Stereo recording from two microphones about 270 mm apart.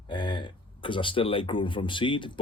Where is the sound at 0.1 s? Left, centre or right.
Centre.